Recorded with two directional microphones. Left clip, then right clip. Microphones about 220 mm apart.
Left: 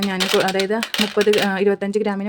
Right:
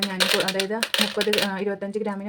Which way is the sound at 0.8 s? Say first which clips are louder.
Left 1 dB; centre (ahead or behind).